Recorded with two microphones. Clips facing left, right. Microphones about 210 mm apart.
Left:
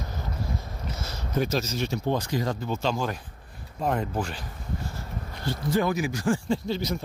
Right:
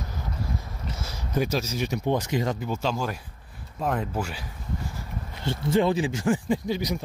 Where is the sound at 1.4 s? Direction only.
10° right (ahead or behind).